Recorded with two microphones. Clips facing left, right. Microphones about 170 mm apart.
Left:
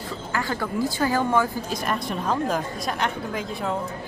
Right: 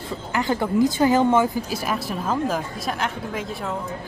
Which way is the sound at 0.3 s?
20° right (ahead or behind).